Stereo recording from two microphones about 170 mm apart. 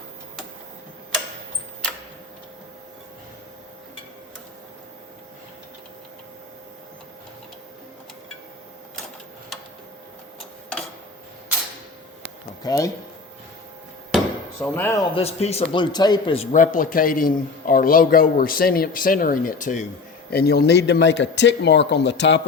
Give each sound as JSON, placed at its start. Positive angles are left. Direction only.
{"t": 12.6, "sound": "speech", "side_deg": 20}
{"t": 14.6, "sound": "speech", "side_deg": 15}
{"t": 15.1, "sound": "a man's voice", "side_deg": 35}
{"t": 20.3, "sound": "speech", "side_deg": 65}